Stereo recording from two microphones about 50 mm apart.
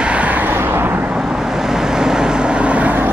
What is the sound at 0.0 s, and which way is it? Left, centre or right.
Vehicle, right.